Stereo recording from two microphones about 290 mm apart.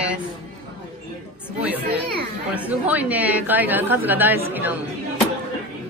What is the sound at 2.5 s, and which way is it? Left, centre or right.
A woman's voice, centre.